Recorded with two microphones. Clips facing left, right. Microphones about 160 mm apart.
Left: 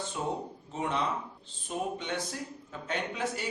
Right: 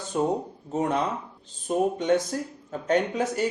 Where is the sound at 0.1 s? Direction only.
45° right (ahead or behind).